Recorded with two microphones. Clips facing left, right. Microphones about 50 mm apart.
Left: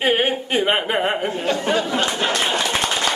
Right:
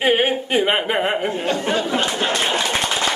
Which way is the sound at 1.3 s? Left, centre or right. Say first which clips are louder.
Even; centre.